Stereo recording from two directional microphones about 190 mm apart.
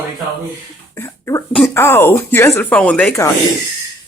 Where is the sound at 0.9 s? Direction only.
15° left (ahead or behind).